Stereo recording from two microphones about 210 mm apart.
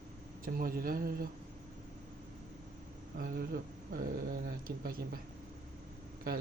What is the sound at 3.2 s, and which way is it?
Speech, 45° right (ahead or behind).